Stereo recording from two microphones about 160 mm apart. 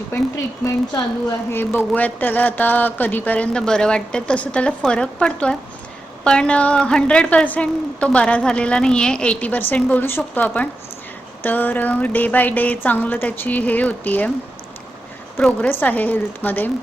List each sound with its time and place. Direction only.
0.1 s a woman's voice: 15° left (ahead or behind)
15.4 s a woman's voice: 10° left (ahead or behind)